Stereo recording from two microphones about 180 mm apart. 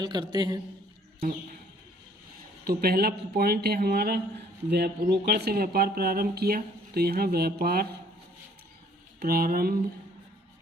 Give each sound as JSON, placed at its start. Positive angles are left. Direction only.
{"t": 0.0, "sound": "a man's voice", "side_deg": -25}
{"t": 2.6, "sound": "speech", "side_deg": -60}
{"t": 9.2, "sound": "speech", "side_deg": -55}